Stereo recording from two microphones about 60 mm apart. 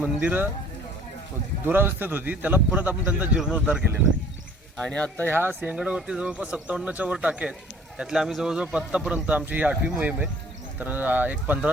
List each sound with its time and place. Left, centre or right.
0.0 s speech: right
1.6 s speech: right
4.8 s speech: centre
5.3 s speech: right
5.6 s speech: centre
7.9 s speech: centre; by 11.7 s right